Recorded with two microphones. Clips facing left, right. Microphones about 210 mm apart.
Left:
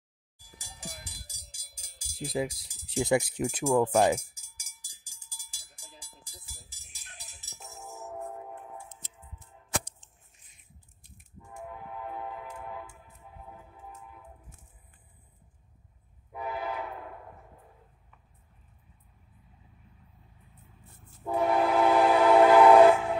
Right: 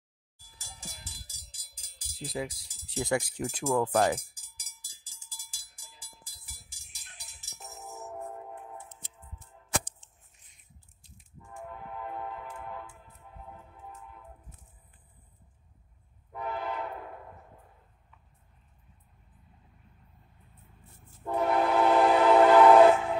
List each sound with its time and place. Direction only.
0.4 s a sound: 15° left (ahead or behind)
1.0 s music: 15° left (ahead or behind)
5.3 s cowbell: 15° left (ahead or behind)
16.3 s train: 5° left (ahead or behind)
21.2 s train: 5° left (ahead or behind)